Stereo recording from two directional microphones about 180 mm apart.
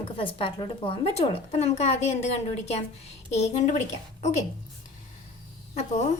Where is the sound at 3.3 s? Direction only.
40° left (ahead or behind).